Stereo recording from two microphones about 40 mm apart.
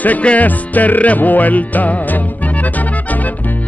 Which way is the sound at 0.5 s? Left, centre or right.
Left.